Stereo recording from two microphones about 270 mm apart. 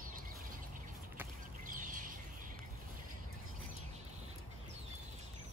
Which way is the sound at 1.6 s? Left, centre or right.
Right.